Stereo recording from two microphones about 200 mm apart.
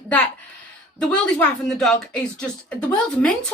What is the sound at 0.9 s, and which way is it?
A woman's voice, 5° left (ahead or behind).